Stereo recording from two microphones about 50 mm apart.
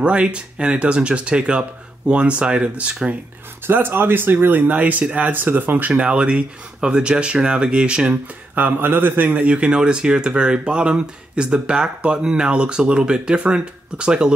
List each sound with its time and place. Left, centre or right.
0.0 s speech: right
3.6 s speech: right
5.9 s speech: right
8.5 s speech: right
9.5 s speech: right